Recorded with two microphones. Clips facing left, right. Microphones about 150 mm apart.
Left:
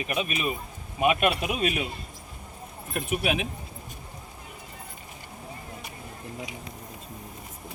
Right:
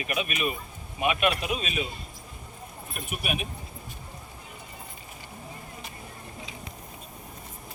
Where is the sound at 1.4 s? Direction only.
55° left (ahead or behind).